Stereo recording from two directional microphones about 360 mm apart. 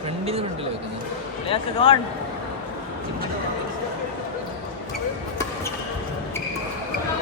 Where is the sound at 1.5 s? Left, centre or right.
Centre.